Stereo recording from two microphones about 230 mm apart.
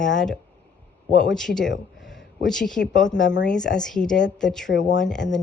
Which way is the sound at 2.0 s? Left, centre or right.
Centre.